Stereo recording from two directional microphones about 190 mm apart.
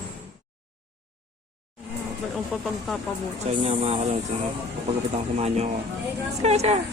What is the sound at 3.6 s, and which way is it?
Speech, 35° right (ahead or behind).